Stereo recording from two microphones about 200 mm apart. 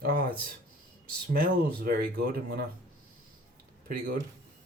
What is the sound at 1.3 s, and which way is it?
Speech, 50° right (ahead or behind).